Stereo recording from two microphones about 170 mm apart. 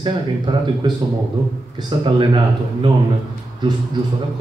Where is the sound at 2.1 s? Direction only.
30° right (ahead or behind).